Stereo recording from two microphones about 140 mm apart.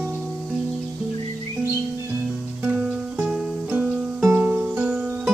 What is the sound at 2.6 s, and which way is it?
Music, 15° right (ahead or behind).